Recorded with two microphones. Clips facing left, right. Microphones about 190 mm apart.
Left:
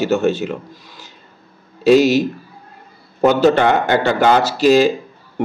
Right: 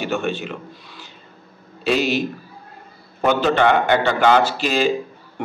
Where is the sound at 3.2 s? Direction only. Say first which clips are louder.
Left 4 dB; 40° left (ahead or behind).